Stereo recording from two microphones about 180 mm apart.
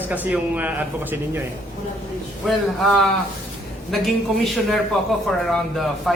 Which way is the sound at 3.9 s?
Centre (ahead or behind).